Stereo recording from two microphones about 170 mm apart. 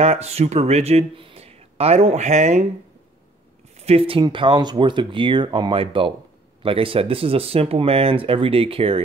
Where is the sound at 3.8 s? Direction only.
35° right (ahead or behind).